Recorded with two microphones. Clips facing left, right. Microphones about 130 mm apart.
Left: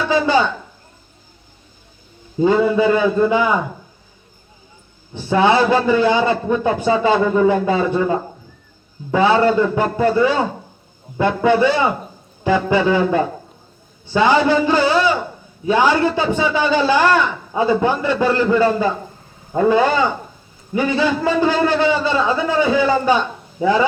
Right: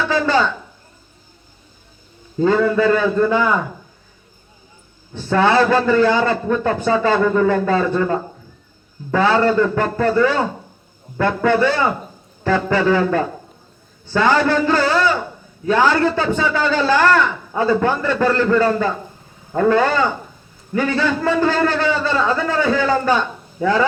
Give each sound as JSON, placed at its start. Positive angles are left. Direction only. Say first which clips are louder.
{"t": 0.1, "sound": "a sound", "louder": "left 2 dB", "side_deg": 15}
{"t": 2.4, "sound": "a man's voice", "louder": "left 1 dB", "side_deg": 15}
{"t": 5.1, "sound": "a man's voice", "louder": "left 1 dB", "side_deg": 15}